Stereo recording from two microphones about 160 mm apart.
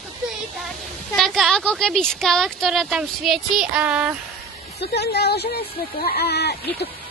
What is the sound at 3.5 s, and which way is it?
Child singing, 10° right (ahead or behind).